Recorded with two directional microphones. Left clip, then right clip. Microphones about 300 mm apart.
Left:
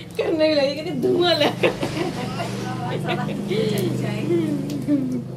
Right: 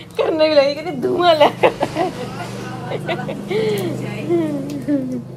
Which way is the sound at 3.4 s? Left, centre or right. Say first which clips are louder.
Right 4 dB; centre.